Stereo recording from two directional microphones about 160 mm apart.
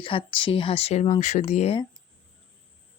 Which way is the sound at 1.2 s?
45° left (ahead or behind).